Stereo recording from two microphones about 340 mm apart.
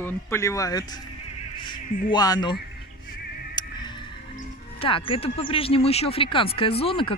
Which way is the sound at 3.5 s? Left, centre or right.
Centre.